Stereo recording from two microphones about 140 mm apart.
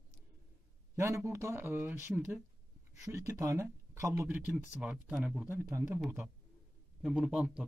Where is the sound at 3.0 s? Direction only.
20° right (ahead or behind).